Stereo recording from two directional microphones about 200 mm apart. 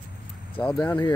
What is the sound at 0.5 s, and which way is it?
Speech, 5° left (ahead or behind).